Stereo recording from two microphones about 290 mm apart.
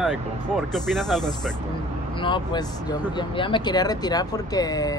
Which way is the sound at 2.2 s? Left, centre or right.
Centre.